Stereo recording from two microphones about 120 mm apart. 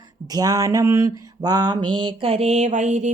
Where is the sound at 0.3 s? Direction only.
30° right (ahead or behind).